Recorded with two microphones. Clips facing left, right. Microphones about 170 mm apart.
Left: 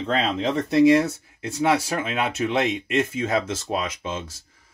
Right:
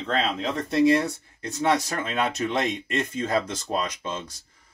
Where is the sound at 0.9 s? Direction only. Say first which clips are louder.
Left 4 dB; 5° left (ahead or behind).